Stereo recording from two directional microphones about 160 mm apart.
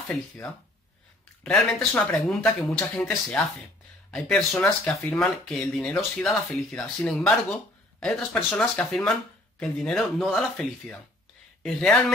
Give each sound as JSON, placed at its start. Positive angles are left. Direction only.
{"t": 1.4, "sound": "speech", "side_deg": 5}